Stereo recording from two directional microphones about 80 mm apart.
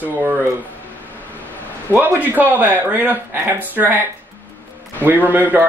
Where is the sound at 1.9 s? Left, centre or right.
Right.